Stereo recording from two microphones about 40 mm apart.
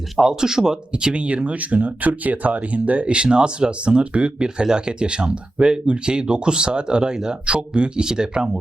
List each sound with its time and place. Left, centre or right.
0.2 s speech: centre
0.9 s speech: right
3.1 s speech: right